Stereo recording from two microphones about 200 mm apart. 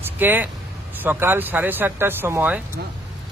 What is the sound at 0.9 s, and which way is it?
Speech, 10° right (ahead or behind).